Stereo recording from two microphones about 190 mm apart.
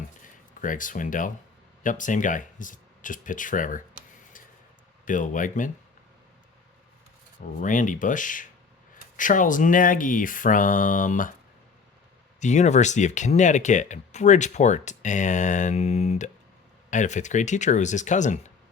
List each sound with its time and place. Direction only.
0.6 s speech: 45° left (ahead or behind)
5.0 s speech: 45° left (ahead or behind)
7.4 s speech: 45° left (ahead or behind)
12.4 s speech: 40° left (ahead or behind)